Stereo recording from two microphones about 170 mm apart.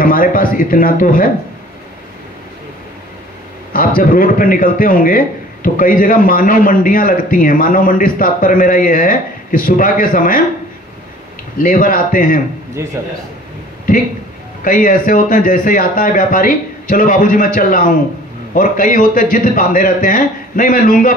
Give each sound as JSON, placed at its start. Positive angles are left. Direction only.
{"t": 0.0, "sound": "a man's voice", "side_deg": 55}
{"t": 3.7, "sound": "a man's voice", "side_deg": 55}
{"t": 11.5, "sound": "a man's voice", "side_deg": 55}
{"t": 12.8, "sound": "a man's voice", "side_deg": -15}
{"t": 14.6, "sound": "speech", "side_deg": 55}